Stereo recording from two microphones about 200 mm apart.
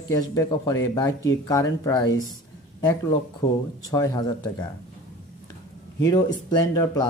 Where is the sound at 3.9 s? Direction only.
20° left (ahead or behind).